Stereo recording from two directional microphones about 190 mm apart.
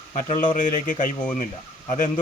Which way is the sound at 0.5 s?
40° left (ahead or behind).